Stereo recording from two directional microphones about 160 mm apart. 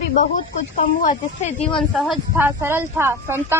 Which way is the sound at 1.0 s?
50° left (ahead or behind).